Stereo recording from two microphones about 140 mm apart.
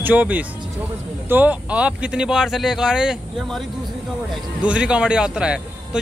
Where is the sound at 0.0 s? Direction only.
10° right (ahead or behind).